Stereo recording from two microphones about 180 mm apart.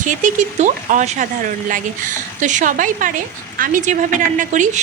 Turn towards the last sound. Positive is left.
turn(degrees=-45)  # may be behind; listen again after turning